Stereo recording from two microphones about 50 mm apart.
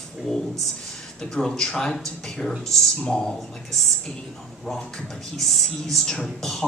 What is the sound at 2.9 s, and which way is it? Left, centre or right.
Speech, centre.